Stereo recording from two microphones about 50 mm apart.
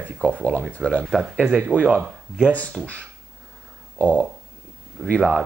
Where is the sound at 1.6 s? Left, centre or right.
Right.